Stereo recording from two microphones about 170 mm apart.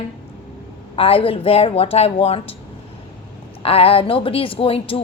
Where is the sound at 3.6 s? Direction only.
35° left (ahead or behind).